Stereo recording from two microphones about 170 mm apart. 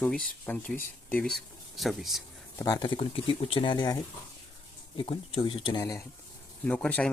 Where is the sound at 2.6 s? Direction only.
25° left (ahead or behind).